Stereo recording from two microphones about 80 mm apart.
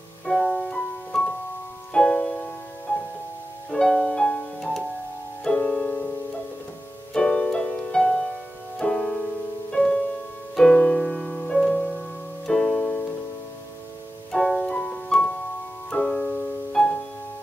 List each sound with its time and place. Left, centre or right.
0.2 s piano: centre
2.0 s music: centre
3.7 s music: centre
7.2 s keyboard: centre
8.7 s music: centre
14.3 s music: centre
15.9 s piano: centre